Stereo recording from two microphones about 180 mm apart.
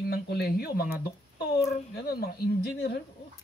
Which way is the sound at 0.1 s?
65° left (ahead or behind).